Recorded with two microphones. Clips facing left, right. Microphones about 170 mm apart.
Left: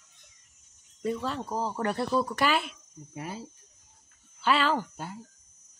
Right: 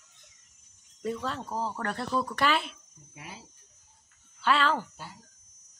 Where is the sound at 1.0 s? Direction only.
5° left (ahead or behind).